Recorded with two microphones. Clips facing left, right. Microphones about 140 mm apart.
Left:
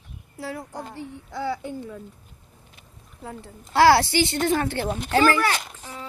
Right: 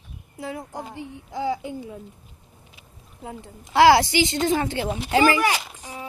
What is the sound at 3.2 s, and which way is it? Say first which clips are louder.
A woman's voice: right 1 dB; 20° right (ahead or behind).